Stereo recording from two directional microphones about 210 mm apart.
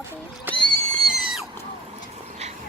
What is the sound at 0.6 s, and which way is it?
Pig, 5° left (ahead or behind).